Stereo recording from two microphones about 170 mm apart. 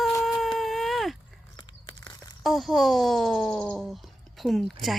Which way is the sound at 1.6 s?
25° left (ahead or behind).